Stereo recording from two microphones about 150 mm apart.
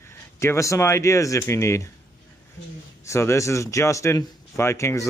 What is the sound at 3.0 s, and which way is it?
A man's voice, 20° left (ahead or behind).